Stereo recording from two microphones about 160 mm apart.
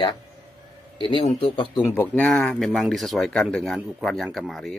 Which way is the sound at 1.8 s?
15° left (ahead or behind).